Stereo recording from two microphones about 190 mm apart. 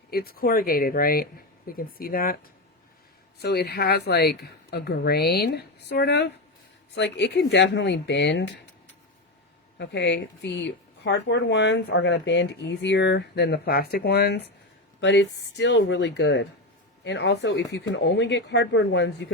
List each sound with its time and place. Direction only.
0.1 s speech: 55° left (ahead or behind); by 8.5 s 70° left (ahead or behind)
9.7 s speech: 65° left (ahead or behind)
15.0 s speech: 70° left (ahead or behind)